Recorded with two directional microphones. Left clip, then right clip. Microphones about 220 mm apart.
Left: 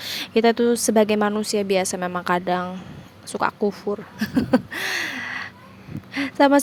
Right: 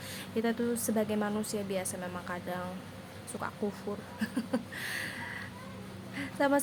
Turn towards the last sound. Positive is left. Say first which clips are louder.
# left 12 dB
turn(degrees=35)  # may be behind; listen again after turning